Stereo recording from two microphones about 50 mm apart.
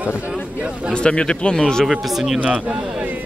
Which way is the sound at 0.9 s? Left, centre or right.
Centre.